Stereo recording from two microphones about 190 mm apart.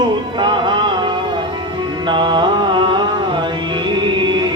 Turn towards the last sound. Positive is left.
turn(degrees=-25)  # may be behind; listen again after turning